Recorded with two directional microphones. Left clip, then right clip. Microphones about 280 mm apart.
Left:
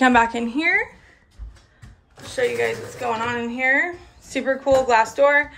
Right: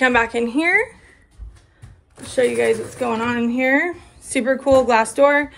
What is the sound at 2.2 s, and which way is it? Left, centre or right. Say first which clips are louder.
A woman's voice: right 4 dB; right.